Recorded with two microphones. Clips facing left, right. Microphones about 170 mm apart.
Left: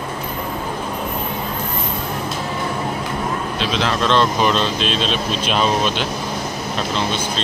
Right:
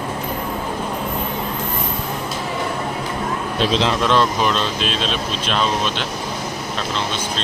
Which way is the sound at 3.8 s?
20° right (ahead or behind).